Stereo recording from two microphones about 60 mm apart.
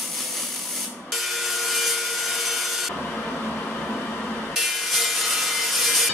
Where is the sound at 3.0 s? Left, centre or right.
Centre.